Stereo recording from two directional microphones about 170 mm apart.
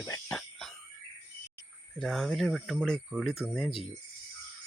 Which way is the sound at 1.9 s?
5° left (ahead or behind).